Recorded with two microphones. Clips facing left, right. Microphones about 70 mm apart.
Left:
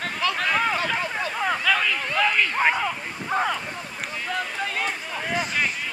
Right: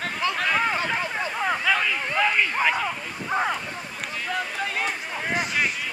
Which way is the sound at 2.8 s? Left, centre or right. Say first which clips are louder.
Left 1 dB; centre.